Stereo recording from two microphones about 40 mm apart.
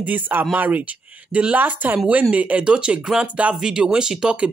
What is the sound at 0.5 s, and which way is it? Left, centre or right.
Speech, right.